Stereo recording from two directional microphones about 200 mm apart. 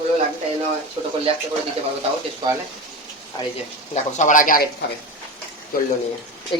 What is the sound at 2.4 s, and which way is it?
Speech, 20° right (ahead or behind).